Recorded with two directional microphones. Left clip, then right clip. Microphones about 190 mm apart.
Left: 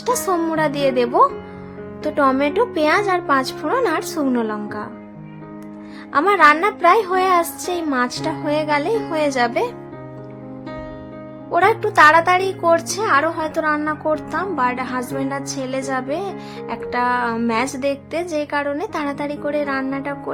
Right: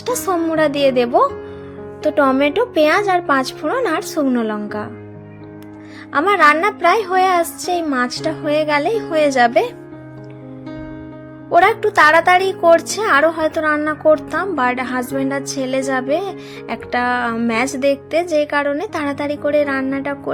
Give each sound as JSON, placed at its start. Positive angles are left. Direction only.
{"t": 0.0, "sound": "speech", "side_deg": -10}
{"t": 6.1, "sound": "speech", "side_deg": -10}
{"t": 11.5, "sound": "speech", "side_deg": -15}